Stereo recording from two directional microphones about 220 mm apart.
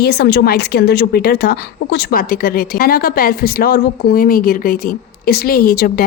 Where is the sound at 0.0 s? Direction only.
50° left (ahead or behind).